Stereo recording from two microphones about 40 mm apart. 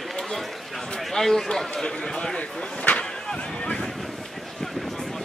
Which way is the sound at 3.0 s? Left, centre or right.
Left.